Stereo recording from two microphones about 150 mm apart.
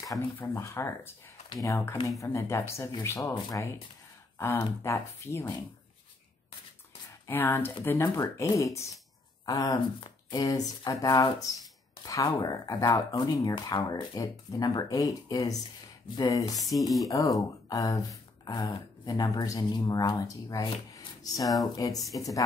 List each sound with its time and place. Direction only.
0.0 s speech: 20° left (ahead or behind)
7.2 s speech: 15° left (ahead or behind)